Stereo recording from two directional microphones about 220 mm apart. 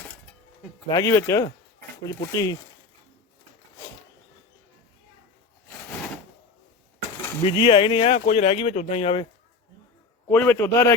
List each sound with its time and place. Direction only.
0.9 s a man's voice: 15° left (ahead or behind)
7.4 s speech: 25° left (ahead or behind)
10.2 s a man's voice: 10° left (ahead or behind)